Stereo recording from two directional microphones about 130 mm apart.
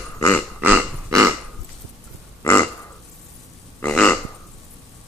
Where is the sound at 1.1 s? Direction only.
20° right (ahead or behind).